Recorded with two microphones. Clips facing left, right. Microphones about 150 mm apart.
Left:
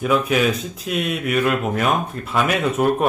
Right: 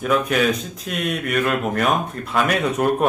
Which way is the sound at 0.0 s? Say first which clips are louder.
Left 1 dB; centre (ahead or behind).